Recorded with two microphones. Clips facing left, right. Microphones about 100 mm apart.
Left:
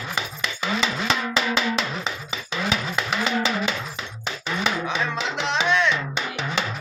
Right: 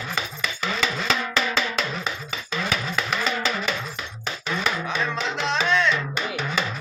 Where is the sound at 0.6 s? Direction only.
15° left (ahead or behind).